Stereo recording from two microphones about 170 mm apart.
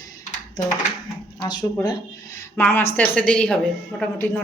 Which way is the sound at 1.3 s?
25° left (ahead or behind).